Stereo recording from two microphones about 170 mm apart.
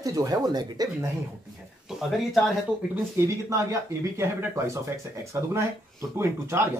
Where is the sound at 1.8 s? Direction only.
Centre (ahead or behind).